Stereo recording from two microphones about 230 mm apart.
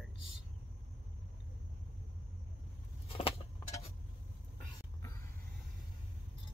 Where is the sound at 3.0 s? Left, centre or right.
Left.